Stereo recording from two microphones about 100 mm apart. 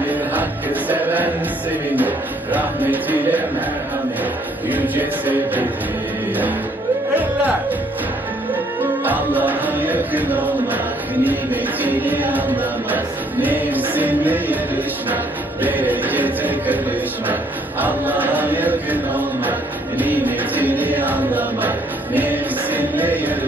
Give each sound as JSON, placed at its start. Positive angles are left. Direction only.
{"t": 0.0, "sound": "music", "side_deg": -15}
{"t": 4.6, "sound": "music", "side_deg": -15}
{"t": 9.0, "sound": "music", "side_deg": -15}
{"t": 15.6, "sound": "music", "side_deg": -15}